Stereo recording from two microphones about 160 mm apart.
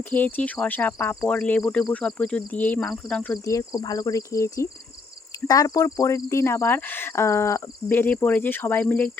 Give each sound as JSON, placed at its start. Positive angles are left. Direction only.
{"t": 0.1, "sound": "speech", "side_deg": 10}
{"t": 3.4, "sound": "speech", "side_deg": 20}